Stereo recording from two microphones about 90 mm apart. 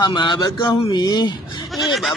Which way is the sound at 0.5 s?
60° left (ahead or behind).